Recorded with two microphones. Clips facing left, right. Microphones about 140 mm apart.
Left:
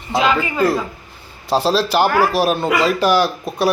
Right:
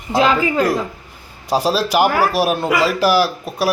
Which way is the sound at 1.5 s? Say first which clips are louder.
Even; 10° right (ahead or behind).